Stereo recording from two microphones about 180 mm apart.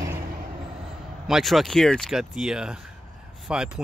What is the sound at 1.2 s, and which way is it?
Speech, centre (ahead or behind).